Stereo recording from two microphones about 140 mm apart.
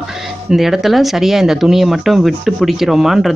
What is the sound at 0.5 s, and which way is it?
Speech, centre (ahead or behind).